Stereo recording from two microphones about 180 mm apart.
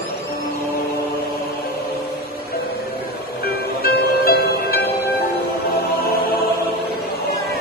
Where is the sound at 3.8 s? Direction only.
60° left (ahead or behind).